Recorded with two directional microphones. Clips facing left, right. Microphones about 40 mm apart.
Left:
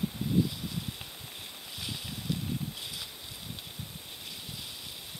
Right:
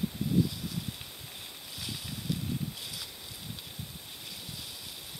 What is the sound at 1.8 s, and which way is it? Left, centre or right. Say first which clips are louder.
Boat: left 1 dB; centre.